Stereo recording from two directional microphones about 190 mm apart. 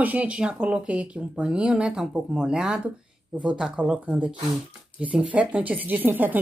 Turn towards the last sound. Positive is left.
turn(degrees=-10)  # may be behind; listen again after turning